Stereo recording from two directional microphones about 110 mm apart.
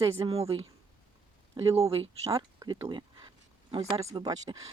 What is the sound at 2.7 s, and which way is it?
Speech, 45° right (ahead or behind).